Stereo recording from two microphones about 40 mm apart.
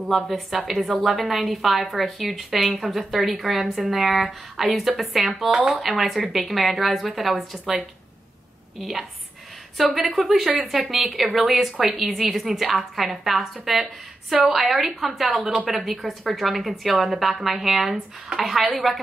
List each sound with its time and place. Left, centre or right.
0.0 s a woman's voice: centre
15.8 s a woman's voice: centre